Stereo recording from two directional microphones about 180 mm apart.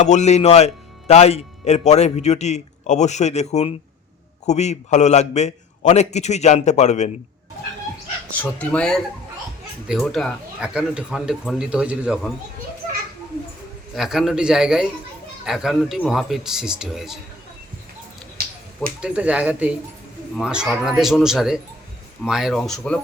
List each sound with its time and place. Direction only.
0.0 s a man's voice: 40° left (ahead or behind)
8.3 s speech: 10° left (ahead or behind)
13.9 s speech: centre (ahead or behind)
19.0 s speech: 5° right (ahead or behind)